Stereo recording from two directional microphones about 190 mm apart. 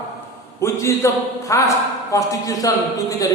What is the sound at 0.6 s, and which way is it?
A man's voice, 15° left (ahead or behind).